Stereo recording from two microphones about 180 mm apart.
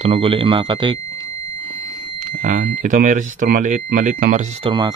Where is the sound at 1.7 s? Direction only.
45° right (ahead or behind).